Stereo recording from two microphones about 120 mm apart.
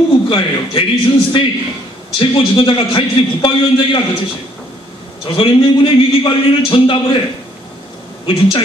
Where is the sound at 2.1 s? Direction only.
45° left (ahead or behind).